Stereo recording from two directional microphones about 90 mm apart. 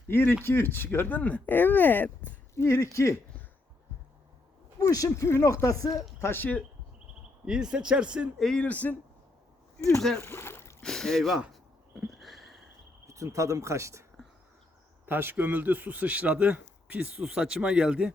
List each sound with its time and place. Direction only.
0.1 s speech: 25° left (ahead or behind)
2.6 s speech: 35° left (ahead or behind)
4.8 s speech: 40° left (ahead or behind)
5.9 s speech: centre (ahead or behind)
6.1 s speech: 25° left (ahead or behind)
7.4 s speech: 5° right (ahead or behind)
8.4 s speech: 5° left (ahead or behind)
8.6 s speech: 20° left (ahead or behind)
10.2 s a sound: 30° left (ahead or behind)
10.8 s speech: 5° left (ahead or behind)
11.9 s a sound: centre (ahead or behind)
13.1 s speech: 35° right (ahead or behind)
15.0 s speech: 25° right (ahead or behind)